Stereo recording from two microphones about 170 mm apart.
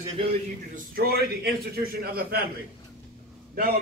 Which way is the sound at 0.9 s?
65° right (ahead or behind).